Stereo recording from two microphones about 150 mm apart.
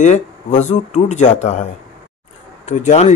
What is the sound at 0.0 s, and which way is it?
Speech, 50° left (ahead or behind).